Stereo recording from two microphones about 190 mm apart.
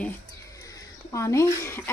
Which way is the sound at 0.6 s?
15° left (ahead or behind).